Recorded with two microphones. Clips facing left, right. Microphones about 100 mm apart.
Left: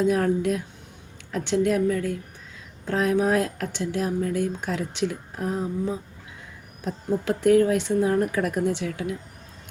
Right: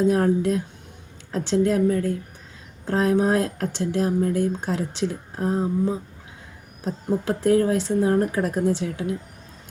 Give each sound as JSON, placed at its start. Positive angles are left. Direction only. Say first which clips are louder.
{"t": 0.0, "sound": "speech", "louder": "right 2 dB", "side_deg": -35}